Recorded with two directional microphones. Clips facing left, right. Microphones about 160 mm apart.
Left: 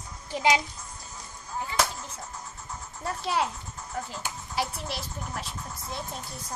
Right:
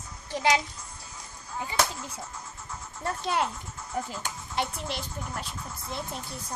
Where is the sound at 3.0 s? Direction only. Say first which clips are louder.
Even; 5° left (ahead or behind).